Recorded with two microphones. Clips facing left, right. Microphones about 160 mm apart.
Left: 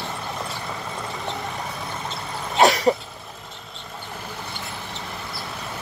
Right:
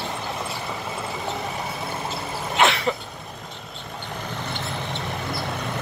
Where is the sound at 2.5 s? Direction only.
40° left (ahead or behind).